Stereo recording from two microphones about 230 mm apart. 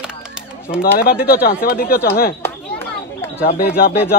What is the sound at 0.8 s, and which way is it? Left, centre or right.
Speech, left.